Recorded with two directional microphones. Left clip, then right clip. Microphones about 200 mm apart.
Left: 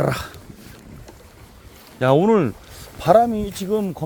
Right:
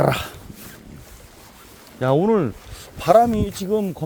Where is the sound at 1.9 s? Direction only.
15° left (ahead or behind).